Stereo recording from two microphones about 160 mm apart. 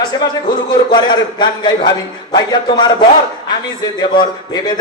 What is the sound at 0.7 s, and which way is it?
A man's voice, 25° left (ahead or behind).